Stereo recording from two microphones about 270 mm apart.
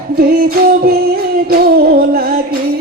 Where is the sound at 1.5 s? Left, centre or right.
Right.